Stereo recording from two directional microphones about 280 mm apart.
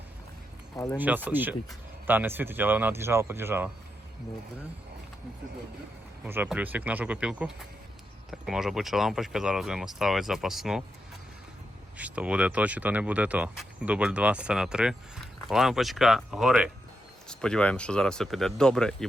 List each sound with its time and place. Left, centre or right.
0.9 s speech: centre
6.2 s speech: centre
11.9 s speech: centre